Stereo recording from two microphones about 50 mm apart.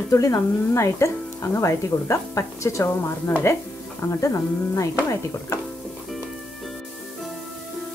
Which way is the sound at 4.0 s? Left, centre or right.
Left.